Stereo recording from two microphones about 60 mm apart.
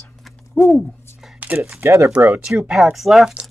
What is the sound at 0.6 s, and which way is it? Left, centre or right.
Speech, left.